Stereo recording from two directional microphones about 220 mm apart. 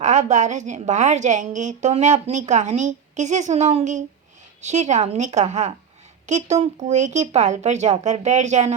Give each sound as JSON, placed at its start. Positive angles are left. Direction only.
{"t": 0.0, "sound": "a woman's voice", "side_deg": -35}